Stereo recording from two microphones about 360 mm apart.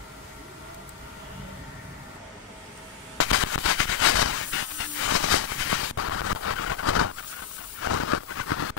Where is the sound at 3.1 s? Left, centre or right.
Left.